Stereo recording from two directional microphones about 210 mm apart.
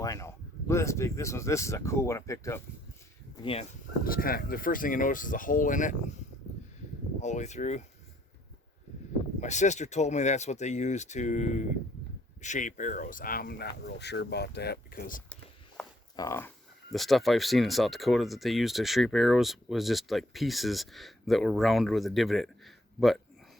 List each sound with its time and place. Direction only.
0.0 s speech: 15° left (ahead or behind)
3.4 s speech: 25° left (ahead or behind)
4.0 s speech: 45° left (ahead or behind)
7.2 s speech: 35° left (ahead or behind)
9.4 s speech: 35° left (ahead or behind)
16.1 s speech: 15° left (ahead or behind)
16.9 s speech: centre (ahead or behind)